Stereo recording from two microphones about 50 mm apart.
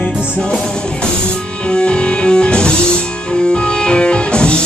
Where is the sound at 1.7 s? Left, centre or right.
Centre.